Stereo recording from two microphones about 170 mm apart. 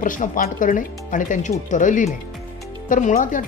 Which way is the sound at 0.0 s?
50° left (ahead or behind).